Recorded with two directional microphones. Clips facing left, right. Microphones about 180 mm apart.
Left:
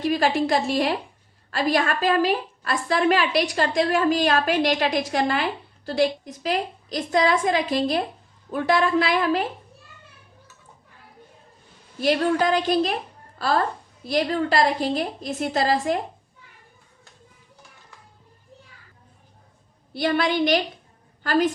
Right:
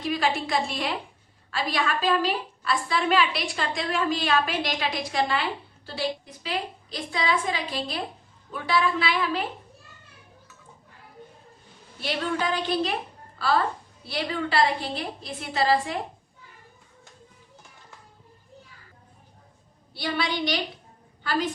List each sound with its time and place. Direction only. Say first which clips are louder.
0.0 s a woman's voice: left 5 dB; 40° left (ahead or behind)
11.9 s a woman's voice: left 8 dB; 40° left (ahead or behind)
14.1 s a woman's voice: left 6 dB; 45° left (ahead or behind)
20.0 s a woman's voice: left 7 dB; 50° left (ahead or behind)